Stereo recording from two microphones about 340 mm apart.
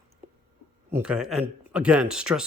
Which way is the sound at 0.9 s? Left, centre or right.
Centre.